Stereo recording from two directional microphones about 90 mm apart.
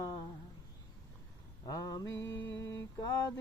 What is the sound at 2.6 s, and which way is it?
Mantra, 35° left (ahead or behind).